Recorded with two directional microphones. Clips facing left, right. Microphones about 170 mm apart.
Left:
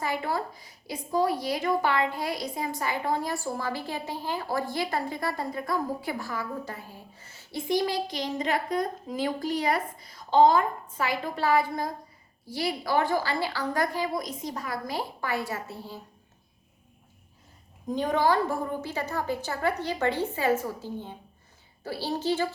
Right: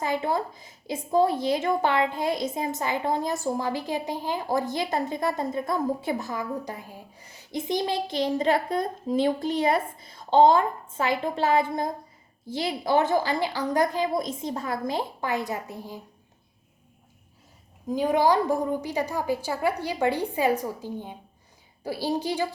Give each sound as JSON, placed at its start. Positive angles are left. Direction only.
{"t": 0.0, "sound": "a woman's voice", "side_deg": -20}
{"t": 17.8, "sound": "a woman's voice", "side_deg": -10}